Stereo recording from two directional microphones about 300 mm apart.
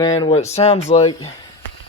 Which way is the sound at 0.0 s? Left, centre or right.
Centre.